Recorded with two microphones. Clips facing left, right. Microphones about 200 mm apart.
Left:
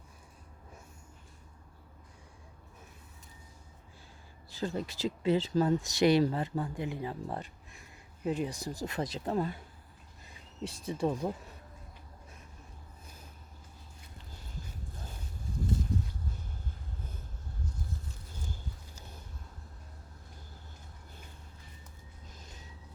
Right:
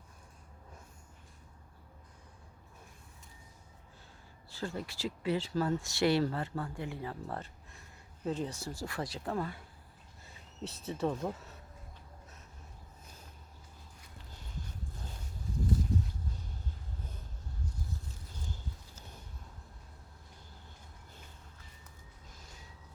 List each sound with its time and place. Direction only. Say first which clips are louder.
4.4 s speech: left 4 dB; 20° left (ahead or behind)